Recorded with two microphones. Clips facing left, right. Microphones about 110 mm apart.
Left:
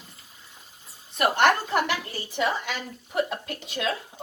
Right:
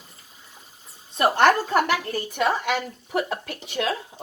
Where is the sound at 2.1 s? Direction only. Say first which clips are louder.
Right 3 dB; 65° right (ahead or behind).